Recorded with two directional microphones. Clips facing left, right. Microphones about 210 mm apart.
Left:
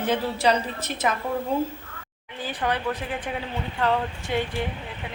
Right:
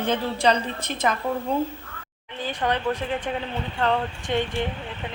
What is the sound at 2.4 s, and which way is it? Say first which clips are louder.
A woman's voice: right 2 dB; 10° left (ahead or behind).